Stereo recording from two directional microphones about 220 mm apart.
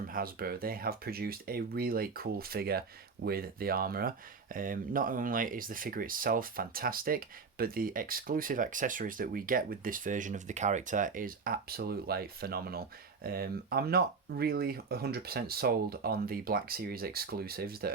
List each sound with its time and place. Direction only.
0.1 s speech: 40° right (ahead or behind)